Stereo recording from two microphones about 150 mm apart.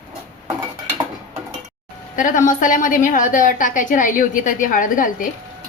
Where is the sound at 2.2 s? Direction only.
60° left (ahead or behind).